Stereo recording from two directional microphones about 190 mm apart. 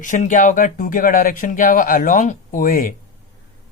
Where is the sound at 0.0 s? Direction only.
40° left (ahead or behind).